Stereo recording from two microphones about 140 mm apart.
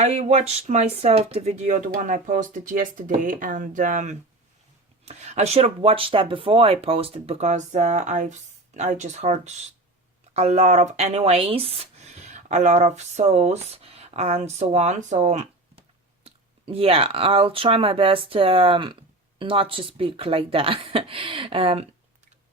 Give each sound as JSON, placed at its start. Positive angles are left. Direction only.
{"t": 0.0, "sound": "speech", "side_deg": -50}
{"t": 5.0, "sound": "speech", "side_deg": -50}
{"t": 16.2, "sound": "speech", "side_deg": -45}